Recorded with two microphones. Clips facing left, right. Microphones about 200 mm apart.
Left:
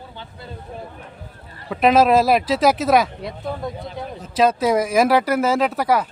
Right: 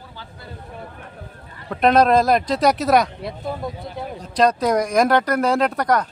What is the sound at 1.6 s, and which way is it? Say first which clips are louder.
Speech: left 1 dB; 5° left (ahead or behind).